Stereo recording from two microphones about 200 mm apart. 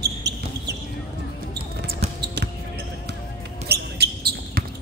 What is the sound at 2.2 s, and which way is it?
Basketball bounce, 55° right (ahead or behind).